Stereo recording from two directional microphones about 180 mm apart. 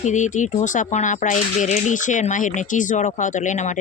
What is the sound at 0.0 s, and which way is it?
Speech, 45° left (ahead or behind).